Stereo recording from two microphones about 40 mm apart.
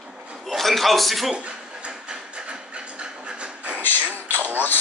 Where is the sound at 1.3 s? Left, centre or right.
Right.